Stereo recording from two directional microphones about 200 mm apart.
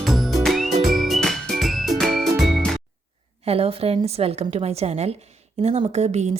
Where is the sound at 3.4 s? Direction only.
30° right (ahead or behind).